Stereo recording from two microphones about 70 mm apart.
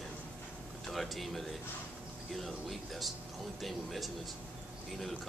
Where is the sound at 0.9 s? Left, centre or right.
Centre.